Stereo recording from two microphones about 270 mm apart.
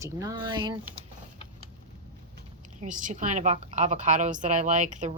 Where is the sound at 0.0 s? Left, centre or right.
Centre.